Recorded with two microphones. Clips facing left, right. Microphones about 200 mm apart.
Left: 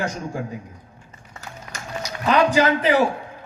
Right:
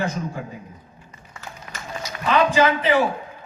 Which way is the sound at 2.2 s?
45° left (ahead or behind).